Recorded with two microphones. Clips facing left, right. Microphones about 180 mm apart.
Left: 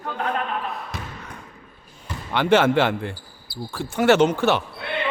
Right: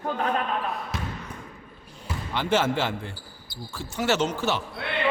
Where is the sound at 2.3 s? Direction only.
65° left (ahead or behind).